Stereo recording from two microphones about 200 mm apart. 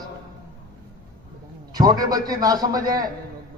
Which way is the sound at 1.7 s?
20° right (ahead or behind).